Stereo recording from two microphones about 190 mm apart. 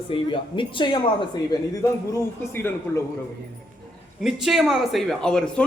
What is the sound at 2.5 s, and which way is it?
Speech, 10° left (ahead or behind).